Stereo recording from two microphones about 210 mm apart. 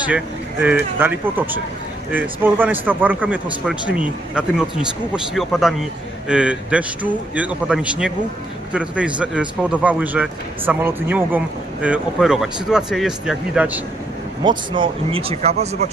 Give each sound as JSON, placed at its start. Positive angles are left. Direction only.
{"t": 0.6, "sound": "speech", "side_deg": -10}
{"t": 14.4, "sound": "speech", "side_deg": -25}